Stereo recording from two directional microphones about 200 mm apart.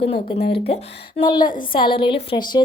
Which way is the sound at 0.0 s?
30° left (ahead or behind).